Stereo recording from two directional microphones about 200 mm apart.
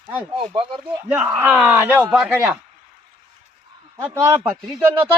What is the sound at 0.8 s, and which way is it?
Speech, 10° right (ahead or behind).